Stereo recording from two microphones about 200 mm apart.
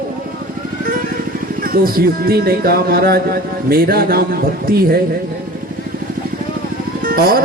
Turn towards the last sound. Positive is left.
turn(degrees=-45)  # may be behind; listen again after turning